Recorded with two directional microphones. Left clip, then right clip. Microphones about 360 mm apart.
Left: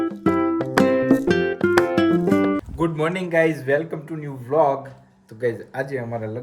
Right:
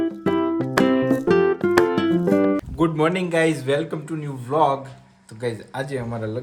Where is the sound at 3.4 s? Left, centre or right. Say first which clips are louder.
Left 2 dB; centre.